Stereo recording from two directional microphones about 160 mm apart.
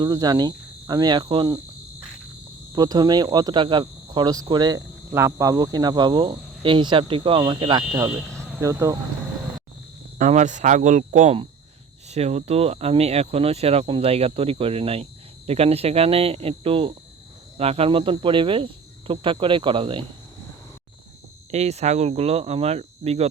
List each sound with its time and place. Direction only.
0.0 s speech: 25° right (ahead or behind)
2.7 s speech: 25° right (ahead or behind)
10.2 s speech: 50° right (ahead or behind)
21.5 s speech: 40° right (ahead or behind)